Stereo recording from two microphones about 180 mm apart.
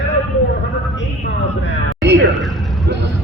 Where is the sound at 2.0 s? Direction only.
70° right (ahead or behind).